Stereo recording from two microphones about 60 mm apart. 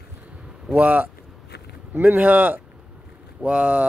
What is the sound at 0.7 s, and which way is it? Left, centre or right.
Speech, right.